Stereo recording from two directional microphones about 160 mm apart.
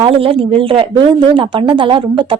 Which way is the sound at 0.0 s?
35° right (ahead or behind).